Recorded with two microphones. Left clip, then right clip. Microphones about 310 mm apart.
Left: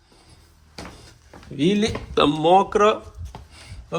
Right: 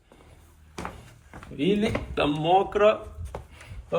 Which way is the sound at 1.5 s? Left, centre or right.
Left.